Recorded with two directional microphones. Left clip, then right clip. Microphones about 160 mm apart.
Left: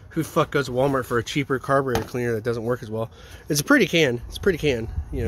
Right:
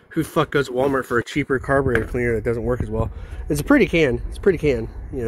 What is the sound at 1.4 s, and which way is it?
Speech, centre (ahead or behind).